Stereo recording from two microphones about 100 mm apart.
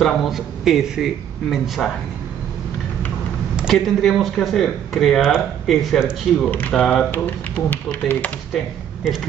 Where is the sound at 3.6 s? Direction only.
5° right (ahead or behind); by 8.3 s 15° left (ahead or behind).